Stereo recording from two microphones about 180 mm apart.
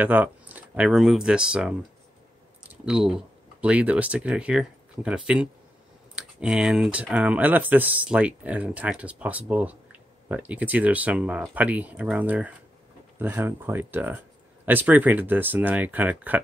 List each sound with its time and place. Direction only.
0.0 s speech: 10° right (ahead or behind)